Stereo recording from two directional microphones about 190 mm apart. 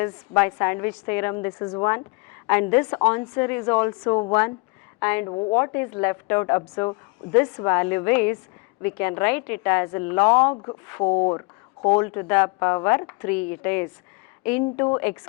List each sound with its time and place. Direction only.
0.0 s a woman's voice: 10° left (ahead or behind)
4.9 s a woman's voice: 10° left (ahead or behind)
5.2 s speech: 30° left (ahead or behind)
5.5 s a woman's voice: 15° left (ahead or behind)
11.1 s speech: 30° left (ahead or behind)
11.9 s a woman's voice: 15° left (ahead or behind)